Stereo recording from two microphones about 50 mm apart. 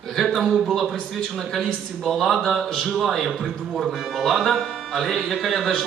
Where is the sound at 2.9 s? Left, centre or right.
Centre.